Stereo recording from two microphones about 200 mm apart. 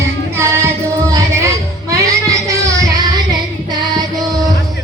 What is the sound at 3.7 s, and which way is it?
Music, 20° right (ahead or behind).